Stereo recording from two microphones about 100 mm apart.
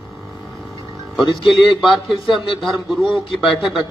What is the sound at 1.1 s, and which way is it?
A man's voice, centre (ahead or behind).